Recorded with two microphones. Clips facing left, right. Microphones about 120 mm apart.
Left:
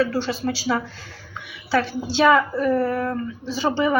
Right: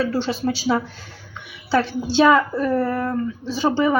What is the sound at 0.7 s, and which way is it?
Speech, 20° right (ahead or behind).